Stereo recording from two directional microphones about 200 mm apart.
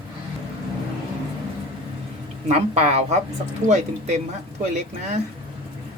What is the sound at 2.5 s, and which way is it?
A man's voice, 35° right (ahead or behind).